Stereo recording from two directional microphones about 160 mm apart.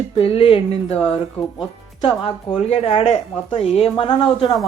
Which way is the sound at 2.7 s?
40° left (ahead or behind).